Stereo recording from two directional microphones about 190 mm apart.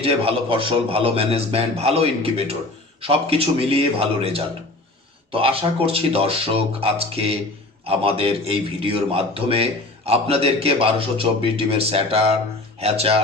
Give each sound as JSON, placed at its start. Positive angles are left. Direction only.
{"t": 0.0, "sound": "a man's voice", "side_deg": -30}